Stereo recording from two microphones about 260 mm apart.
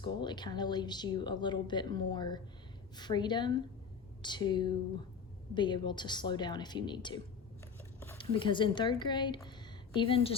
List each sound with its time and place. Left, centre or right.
0.0 s speech: centre
7.9 s a sound: centre
8.2 s a woman's voice: centre